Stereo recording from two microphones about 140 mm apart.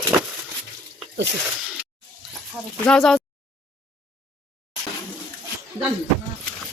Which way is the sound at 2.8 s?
5° left (ahead or behind).